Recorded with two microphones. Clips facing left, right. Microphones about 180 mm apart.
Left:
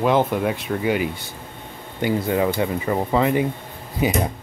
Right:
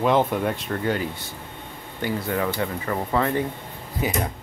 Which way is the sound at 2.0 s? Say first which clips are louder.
Left 5 dB; 20° left (ahead or behind).